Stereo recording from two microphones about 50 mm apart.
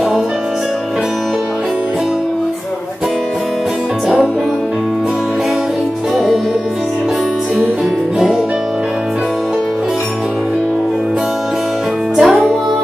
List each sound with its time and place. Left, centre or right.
6.1 s music: centre
12.2 s music: centre